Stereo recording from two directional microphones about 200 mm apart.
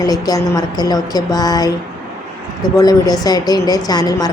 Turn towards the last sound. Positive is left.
turn(degrees=20)  # may be behind; listen again after turning